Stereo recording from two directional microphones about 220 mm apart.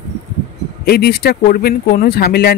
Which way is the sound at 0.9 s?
45° left (ahead or behind).